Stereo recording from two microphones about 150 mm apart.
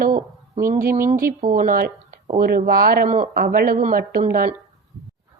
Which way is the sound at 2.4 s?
75° right (ahead or behind).